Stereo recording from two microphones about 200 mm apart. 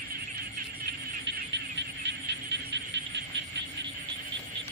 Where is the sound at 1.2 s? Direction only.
60° right (ahead or behind).